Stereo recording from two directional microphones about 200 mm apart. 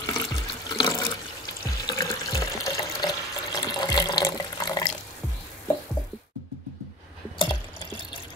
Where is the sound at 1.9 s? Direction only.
20° left (ahead or behind).